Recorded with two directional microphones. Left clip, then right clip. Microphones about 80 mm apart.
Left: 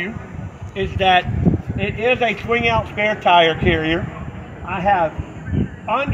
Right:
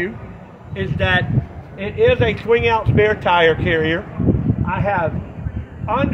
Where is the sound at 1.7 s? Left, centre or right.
Centre.